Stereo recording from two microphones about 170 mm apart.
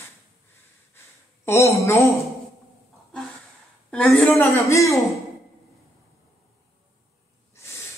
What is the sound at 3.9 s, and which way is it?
A woman's voice, 10° left (ahead or behind).